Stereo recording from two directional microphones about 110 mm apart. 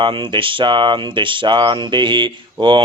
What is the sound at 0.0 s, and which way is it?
Speech, 50° right (ahead or behind).